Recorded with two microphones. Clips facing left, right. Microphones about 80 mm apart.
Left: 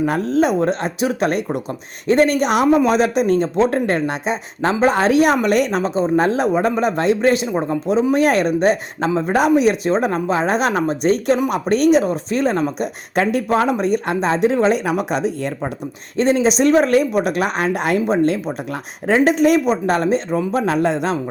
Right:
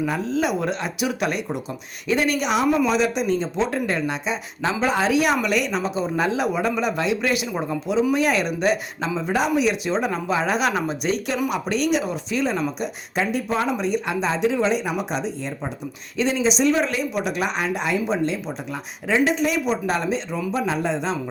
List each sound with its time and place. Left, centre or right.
0.0 s speech: left
0.4 s speech: left
14.8 s speech: left
16.1 s speech: left